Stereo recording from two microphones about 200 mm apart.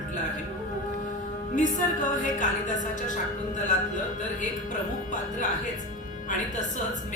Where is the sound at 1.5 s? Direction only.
40° left (ahead or behind).